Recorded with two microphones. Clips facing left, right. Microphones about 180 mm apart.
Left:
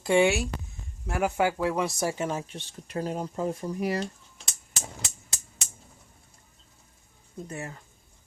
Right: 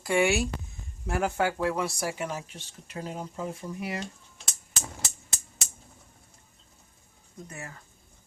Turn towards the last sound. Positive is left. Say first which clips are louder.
# left 5 dB
turn(degrees=25)  # may be behind; listen again after turning